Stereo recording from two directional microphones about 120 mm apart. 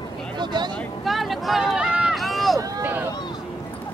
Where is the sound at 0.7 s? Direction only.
Centre (ahead or behind).